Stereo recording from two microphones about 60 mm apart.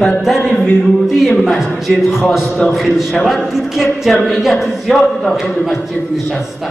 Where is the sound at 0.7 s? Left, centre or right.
Centre.